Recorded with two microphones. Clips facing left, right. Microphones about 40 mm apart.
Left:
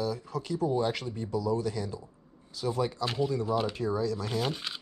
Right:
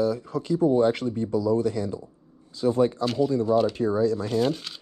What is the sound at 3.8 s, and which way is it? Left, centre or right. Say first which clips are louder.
Speech: right 7 dB; right.